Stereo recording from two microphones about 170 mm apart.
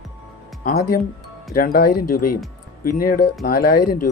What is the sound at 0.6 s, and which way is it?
Speech, 65° left (ahead or behind).